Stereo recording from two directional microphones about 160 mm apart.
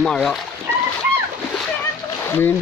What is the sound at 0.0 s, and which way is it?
Speech, centre (ahead or behind).